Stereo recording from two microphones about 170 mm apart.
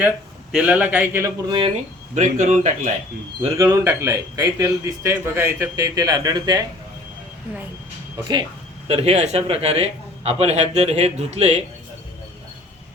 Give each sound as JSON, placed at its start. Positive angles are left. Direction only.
{"t": 0.5, "sound": "a man's voice", "side_deg": -10}
{"t": 2.1, "sound": "a man's voice", "side_deg": -45}
{"t": 3.6, "sound": "a man's voice", "side_deg": -15}
{"t": 8.9, "sound": "a man's voice", "side_deg": -40}